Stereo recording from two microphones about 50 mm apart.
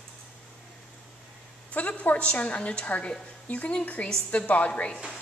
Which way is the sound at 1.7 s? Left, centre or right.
Left.